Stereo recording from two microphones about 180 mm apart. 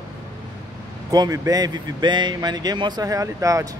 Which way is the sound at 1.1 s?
20° right (ahead or behind).